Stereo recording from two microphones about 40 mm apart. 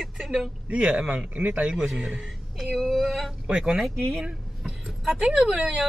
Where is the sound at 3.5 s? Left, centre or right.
Right.